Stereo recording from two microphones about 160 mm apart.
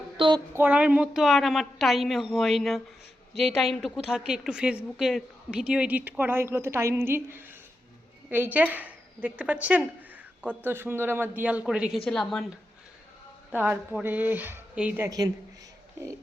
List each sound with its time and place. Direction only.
0.2 s a sound: 30° right (ahead or behind)
0.5 s a woman's voice: 10° right (ahead or behind)
13.5 s a woman's voice: 10° right (ahead or behind)